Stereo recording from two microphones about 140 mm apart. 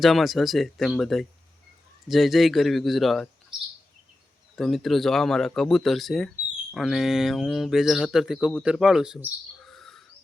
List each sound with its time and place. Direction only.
0.0 s speech: centre (ahead or behind)
4.5 s speech: centre (ahead or behind)